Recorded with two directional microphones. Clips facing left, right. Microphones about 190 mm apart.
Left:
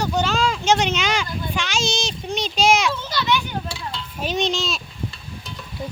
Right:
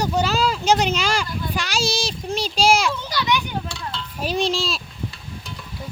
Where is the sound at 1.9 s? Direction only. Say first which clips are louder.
Right 1 dB; 35° right (ahead or behind).